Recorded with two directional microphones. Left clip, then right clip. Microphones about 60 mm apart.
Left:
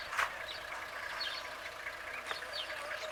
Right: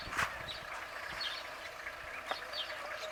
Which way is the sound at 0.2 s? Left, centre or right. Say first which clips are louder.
Left 1 dB; centre.